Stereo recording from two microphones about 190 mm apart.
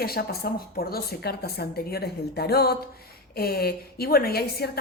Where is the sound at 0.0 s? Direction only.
55° left (ahead or behind).